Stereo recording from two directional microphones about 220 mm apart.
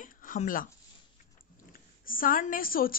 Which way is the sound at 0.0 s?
40° left (ahead or behind).